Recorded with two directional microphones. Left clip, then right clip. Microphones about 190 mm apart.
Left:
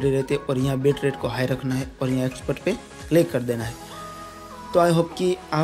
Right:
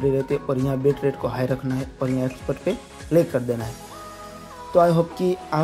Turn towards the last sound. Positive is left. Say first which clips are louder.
# even
turn(degrees=0)  # may be behind; listen again after turning